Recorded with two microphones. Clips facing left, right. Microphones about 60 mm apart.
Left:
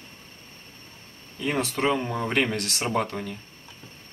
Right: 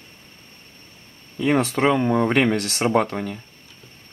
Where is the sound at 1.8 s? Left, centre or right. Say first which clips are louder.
Right 2 dB; right.